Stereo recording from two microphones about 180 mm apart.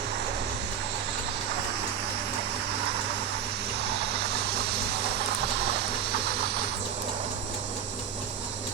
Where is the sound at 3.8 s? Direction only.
65° right (ahead or behind).